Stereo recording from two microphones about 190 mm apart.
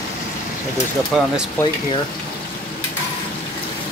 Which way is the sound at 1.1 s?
5° right (ahead or behind).